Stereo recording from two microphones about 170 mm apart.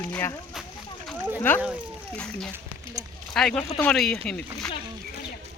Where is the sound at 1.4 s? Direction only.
10° left (ahead or behind).